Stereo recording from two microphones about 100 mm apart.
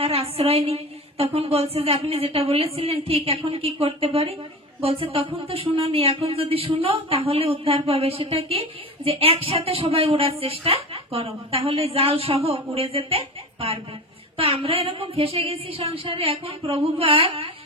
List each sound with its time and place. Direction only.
0.0 s speech: 85° right; by 17.5 s 65° right (ahead or behind)